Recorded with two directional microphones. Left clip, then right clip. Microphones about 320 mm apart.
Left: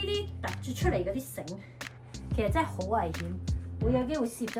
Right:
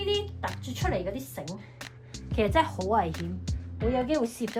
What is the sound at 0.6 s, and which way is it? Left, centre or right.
Speech, centre.